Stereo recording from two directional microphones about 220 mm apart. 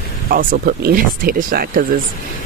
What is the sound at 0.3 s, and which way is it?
Speech, 40° right (ahead or behind).